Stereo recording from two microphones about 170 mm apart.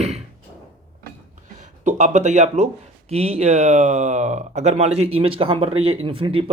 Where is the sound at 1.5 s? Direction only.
45° right (ahead or behind).